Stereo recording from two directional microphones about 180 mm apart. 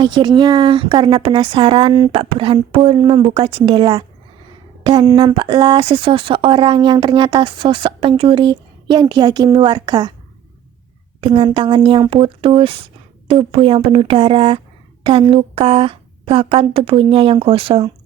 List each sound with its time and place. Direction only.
0.0 s speech: 25° right (ahead or behind)
11.2 s a woman's voice: 30° right (ahead or behind)